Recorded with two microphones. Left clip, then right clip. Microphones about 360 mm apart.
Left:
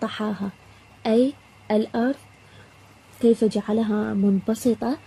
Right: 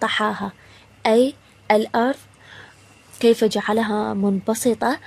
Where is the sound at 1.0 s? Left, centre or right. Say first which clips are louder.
Right 4 dB; right.